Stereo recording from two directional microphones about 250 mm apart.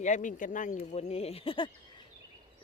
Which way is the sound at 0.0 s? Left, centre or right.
Left.